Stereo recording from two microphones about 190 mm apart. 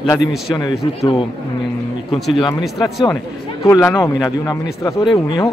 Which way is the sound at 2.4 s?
25° left (ahead or behind).